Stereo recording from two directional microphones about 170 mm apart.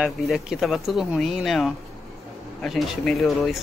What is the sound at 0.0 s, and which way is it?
Speech, 5° right (ahead or behind).